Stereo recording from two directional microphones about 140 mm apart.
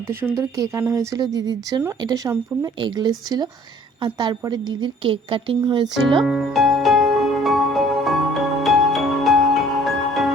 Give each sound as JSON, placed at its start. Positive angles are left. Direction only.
{"t": 0.1, "sound": "a woman's voice", "side_deg": -15}
{"t": 6.2, "sound": "music", "side_deg": 0}